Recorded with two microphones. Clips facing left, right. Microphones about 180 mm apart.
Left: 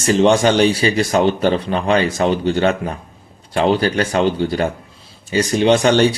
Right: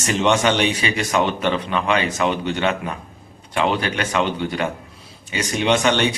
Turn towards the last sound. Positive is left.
turn(degrees=35)  # may be behind; listen again after turning